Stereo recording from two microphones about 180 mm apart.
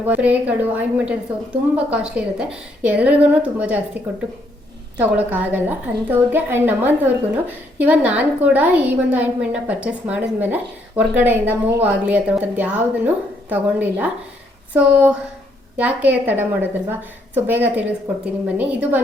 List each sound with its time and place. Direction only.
0.0 s a woman's voice: 10° right (ahead or behind)